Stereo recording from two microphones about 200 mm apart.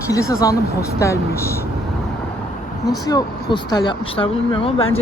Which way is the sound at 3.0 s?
20° left (ahead or behind).